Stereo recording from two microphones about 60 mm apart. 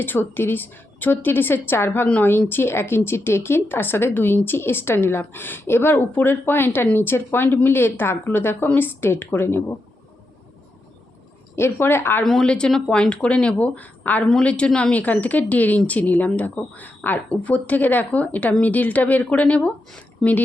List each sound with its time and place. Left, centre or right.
0.0 s a woman's voice: left
11.5 s speech: left
12.2 s a woman's voice: centre
12.5 s speech: centre
20.2 s speech: centre